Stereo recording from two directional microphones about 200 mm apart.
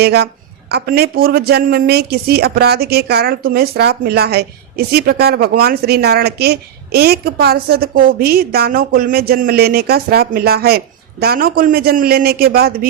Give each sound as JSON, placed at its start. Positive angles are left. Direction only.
{"t": 0.0, "sound": "a woman's voice", "side_deg": -55}